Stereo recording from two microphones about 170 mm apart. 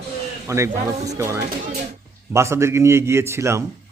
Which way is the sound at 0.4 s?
15° right (ahead or behind).